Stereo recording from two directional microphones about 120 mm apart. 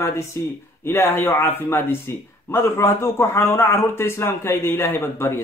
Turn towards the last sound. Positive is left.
turn(degrees=20)  # may be behind; listen again after turning